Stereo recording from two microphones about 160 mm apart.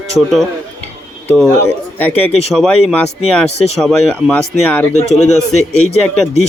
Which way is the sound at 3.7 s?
Centre (ahead or behind).